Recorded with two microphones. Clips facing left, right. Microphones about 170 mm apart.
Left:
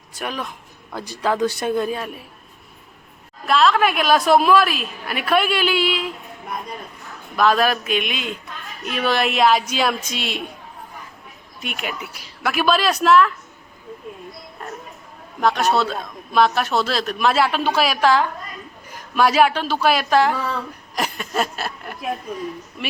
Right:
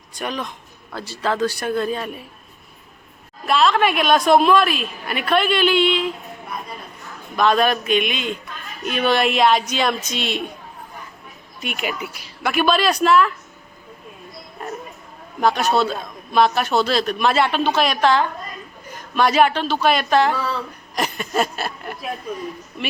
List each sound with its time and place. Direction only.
0.1 s a man's voice: 5° left (ahead or behind)
3.4 s a man's voice: centre (ahead or behind)
7.3 s a man's voice: centre (ahead or behind)
11.6 s a man's voice: centre (ahead or behind)
15.4 s a man's voice: centre (ahead or behind)
20.3 s speech: 15° left (ahead or behind)
20.9 s a sound: 5° left (ahead or behind)